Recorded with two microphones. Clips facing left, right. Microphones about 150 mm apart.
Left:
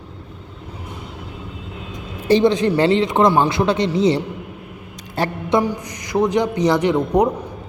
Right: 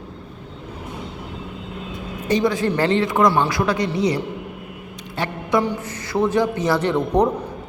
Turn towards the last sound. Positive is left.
turn(degrees=10)  # may be behind; listen again after turning